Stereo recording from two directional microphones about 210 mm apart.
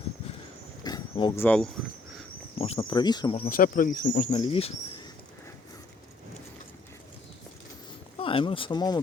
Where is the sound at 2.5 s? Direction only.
30° left (ahead or behind).